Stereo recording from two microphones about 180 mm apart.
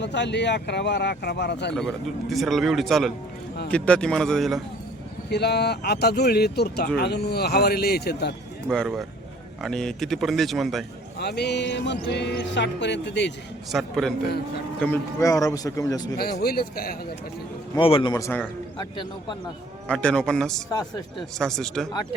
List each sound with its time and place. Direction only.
0.0 s speech: 75° left (ahead or behind)
2.3 s speech: centre (ahead or behind)
5.3 s speech: 65° left (ahead or behind)
8.7 s speech: centre (ahead or behind)
11.2 s speech: 65° left (ahead or behind)
13.7 s speech: centre (ahead or behind)
15.2 s a man's voice: 20° left (ahead or behind)
16.1 s speech: 60° left (ahead or behind)
17.7 s a man's voice: 30° left (ahead or behind); by 18.4 s 15° left (ahead or behind)
18.8 s a man's voice: 25° left (ahead or behind)
19.9 s speech: 5° left (ahead or behind)
20.7 s a man's voice: 25° left (ahead or behind)
21.3 s speech: centre (ahead or behind)